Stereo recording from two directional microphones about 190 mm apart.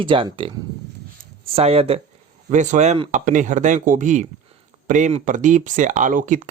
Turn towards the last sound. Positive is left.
turn(degrees=-40)  # may be behind; listen again after turning